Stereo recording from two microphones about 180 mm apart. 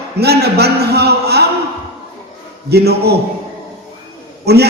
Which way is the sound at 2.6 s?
65° right (ahead or behind).